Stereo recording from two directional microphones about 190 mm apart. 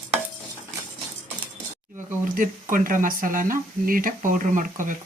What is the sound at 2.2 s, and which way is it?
Speech, 45° right (ahead or behind).